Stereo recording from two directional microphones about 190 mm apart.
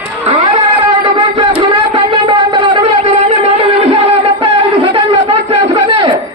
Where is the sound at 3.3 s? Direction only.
30° right (ahead or behind).